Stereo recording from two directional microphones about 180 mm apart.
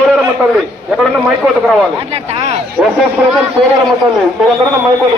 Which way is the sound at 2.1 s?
30° right (ahead or behind).